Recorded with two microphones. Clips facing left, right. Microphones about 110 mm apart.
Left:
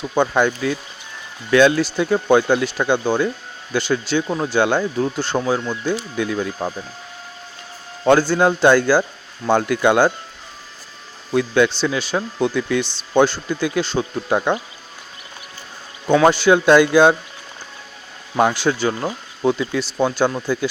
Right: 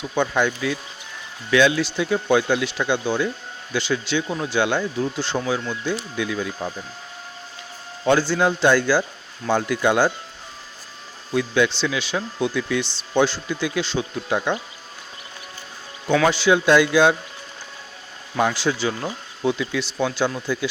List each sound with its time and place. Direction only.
0.1 s speech: 45° left (ahead or behind)
8.0 s speech: 50° left (ahead or behind)
11.3 s speech: 50° left (ahead or behind)
16.2 s speech: 50° left (ahead or behind)
18.3 s speech: 55° left (ahead or behind)